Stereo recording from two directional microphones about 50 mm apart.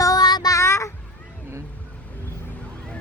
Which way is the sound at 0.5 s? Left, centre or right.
Left.